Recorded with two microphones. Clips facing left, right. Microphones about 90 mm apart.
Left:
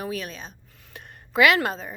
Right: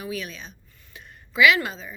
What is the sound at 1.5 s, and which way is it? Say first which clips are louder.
Speech: left 3 dB; 50° left (ahead or behind).